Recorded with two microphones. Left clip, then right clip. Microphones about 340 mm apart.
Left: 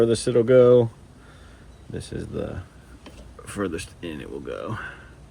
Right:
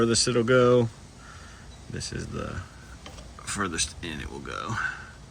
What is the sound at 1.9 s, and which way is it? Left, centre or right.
Speech, centre.